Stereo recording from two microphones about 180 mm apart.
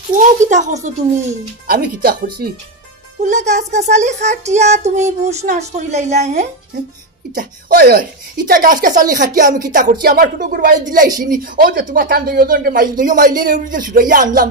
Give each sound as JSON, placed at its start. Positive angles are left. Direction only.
{"t": 0.1, "sound": "speech", "side_deg": -45}
{"t": 1.7, "sound": "speech", "side_deg": -60}
{"t": 3.2, "sound": "speech", "side_deg": -40}
{"t": 7.3, "sound": "speech", "side_deg": -60}
{"t": 8.5, "sound": "speech", "side_deg": -50}
{"t": 10.0, "sound": "speech", "side_deg": -55}